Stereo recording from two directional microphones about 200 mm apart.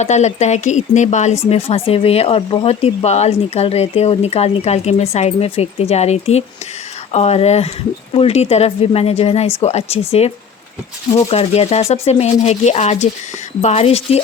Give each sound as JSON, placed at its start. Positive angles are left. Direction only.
{"t": 0.0, "sound": "speech", "side_deg": 35}